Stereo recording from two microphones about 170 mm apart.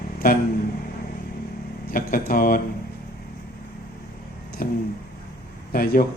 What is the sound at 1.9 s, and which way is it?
Speech, 55° left (ahead or behind).